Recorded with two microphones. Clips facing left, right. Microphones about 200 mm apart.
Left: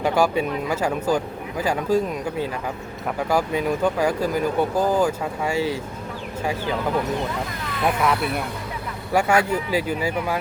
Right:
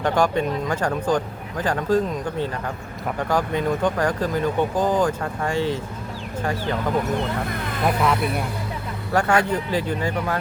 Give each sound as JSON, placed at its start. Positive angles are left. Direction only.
{"t": 0.0, "sound": "speech", "side_deg": 10}
{"t": 7.9, "sound": "speech", "side_deg": 0}